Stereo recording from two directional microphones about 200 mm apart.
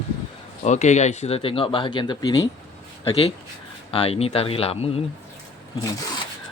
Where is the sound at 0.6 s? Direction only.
35° left (ahead or behind).